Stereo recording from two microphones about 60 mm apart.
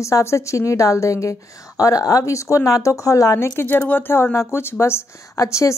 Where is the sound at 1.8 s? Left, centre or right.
Left.